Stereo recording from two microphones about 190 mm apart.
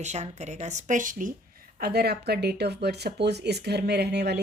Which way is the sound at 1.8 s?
55° right (ahead or behind).